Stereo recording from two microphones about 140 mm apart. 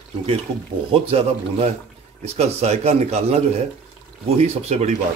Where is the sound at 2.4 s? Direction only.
50° right (ahead or behind).